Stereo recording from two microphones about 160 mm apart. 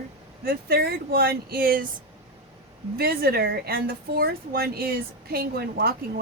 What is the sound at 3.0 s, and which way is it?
Speech, 70° right (ahead or behind).